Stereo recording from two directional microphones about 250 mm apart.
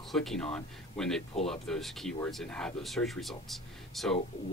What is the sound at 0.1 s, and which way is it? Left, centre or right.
Speech, centre.